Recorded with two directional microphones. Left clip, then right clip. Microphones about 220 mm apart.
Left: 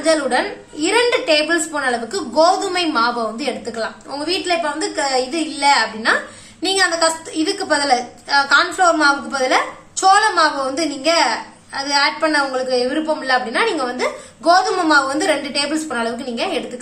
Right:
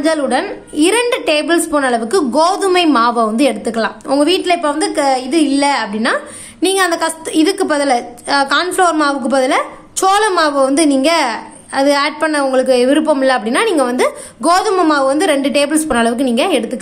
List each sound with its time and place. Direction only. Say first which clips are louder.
0.0 s a woman's voice: right 2 dB; 40° right (ahead or behind)